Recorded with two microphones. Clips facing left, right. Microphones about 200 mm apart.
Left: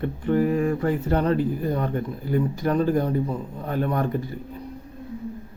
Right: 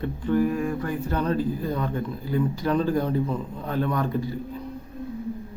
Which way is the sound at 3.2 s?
15° left (ahead or behind).